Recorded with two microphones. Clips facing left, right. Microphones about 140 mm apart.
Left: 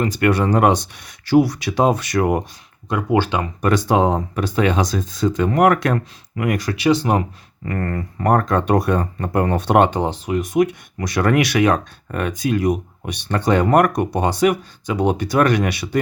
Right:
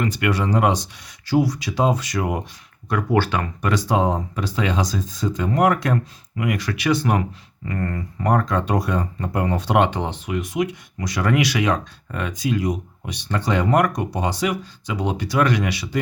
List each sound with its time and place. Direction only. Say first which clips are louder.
0.0 s speech: left 4 dB; 40° left (ahead or behind)
0.3 s speech: left 5 dB; 55° left (ahead or behind)
2.9 s speech: left 2 dB; 20° left (ahead or behind)
3.6 s speech: left 4 dB; 55° left (ahead or behind)
6.7 s speech: left 4 dB; 30° left (ahead or behind)
7.6 s speech: left 3 dB; 60° left (ahead or behind)